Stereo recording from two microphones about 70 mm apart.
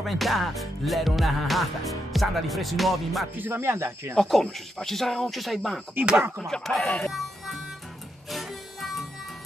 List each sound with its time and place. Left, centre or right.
0.0 s music: centre
3.3 s speech: right
4.2 s music: centre
6.4 s speech: centre
7.1 s music: centre